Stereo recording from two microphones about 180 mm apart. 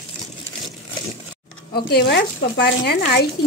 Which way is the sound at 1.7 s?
65° left (ahead or behind).